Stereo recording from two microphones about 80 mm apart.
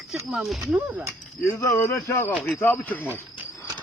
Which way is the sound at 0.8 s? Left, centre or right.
Right.